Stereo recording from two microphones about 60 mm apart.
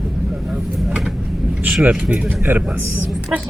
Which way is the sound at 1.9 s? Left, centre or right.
Right.